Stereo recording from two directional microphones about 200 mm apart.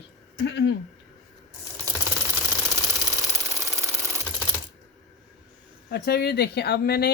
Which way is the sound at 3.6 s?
15° right (ahead or behind).